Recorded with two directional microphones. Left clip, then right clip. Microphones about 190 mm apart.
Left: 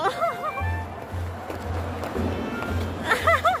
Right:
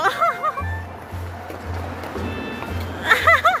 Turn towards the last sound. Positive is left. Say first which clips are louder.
# right 6 dB
turn(degrees=10)  # may be behind; listen again after turning